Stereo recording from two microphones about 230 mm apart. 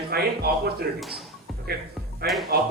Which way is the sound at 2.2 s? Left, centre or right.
Right.